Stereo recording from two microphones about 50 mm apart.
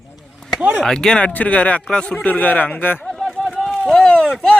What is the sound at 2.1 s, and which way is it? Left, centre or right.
Speech, left.